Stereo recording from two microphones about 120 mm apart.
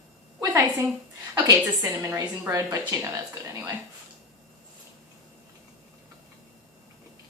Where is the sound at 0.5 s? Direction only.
15° right (ahead or behind).